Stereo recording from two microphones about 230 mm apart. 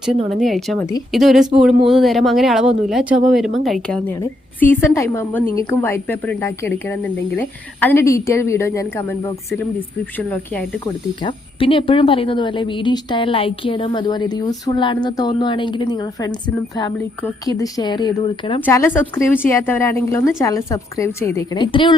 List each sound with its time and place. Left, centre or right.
0.3 s speech: centre
11.2 s speech: left
18.6 s speech: centre